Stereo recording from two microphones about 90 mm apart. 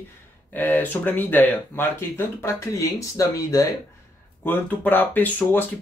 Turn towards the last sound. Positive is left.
turn(degrees=20)  # may be behind; listen again after turning